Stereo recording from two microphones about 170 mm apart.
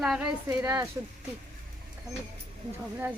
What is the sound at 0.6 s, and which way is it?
Speech, 15° right (ahead or behind).